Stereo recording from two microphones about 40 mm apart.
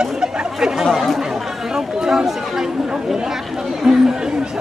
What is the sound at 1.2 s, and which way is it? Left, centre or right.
Chatter, centre.